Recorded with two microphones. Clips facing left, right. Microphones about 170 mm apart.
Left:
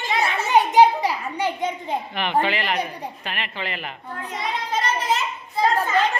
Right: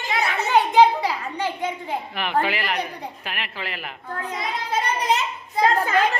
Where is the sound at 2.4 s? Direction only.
5° right (ahead or behind).